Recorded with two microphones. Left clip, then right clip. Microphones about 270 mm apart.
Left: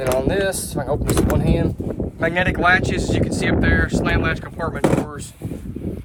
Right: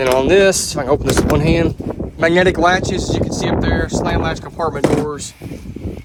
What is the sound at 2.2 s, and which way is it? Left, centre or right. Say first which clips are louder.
Speech: right 6 dB; right.